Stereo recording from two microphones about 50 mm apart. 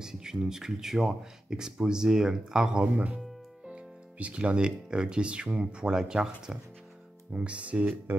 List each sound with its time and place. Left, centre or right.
0.0 s speech: centre
2.8 s speech: right; by 6.3 s centre
7.3 s speech: right